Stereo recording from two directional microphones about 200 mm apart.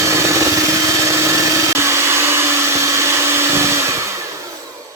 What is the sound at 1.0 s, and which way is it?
Vacuum cleaner, 15° right (ahead or behind).